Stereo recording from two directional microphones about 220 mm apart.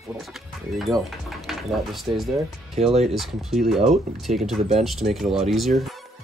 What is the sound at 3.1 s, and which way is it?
Speech, centre (ahead or behind).